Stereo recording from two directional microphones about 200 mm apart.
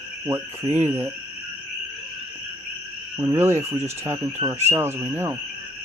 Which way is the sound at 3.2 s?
15° right (ahead or behind).